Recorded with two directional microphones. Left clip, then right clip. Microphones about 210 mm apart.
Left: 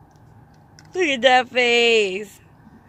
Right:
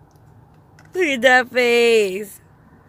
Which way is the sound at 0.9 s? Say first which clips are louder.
Right 1 dB; 15° right (ahead or behind).